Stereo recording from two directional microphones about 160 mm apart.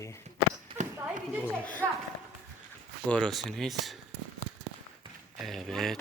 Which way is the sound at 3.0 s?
5° left (ahead or behind).